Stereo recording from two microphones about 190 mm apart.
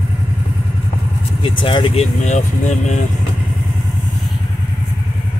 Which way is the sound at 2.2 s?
40° left (ahead or behind).